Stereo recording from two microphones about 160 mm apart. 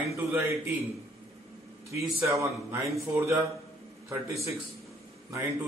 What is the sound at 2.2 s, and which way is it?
Speech, 20° right (ahead or behind).